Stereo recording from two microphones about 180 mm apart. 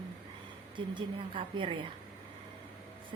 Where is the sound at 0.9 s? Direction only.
30° right (ahead or behind).